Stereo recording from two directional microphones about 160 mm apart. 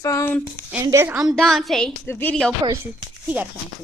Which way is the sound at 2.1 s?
10° left (ahead or behind).